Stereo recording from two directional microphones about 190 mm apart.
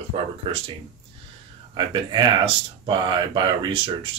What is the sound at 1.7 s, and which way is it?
Speech, 25° right (ahead or behind).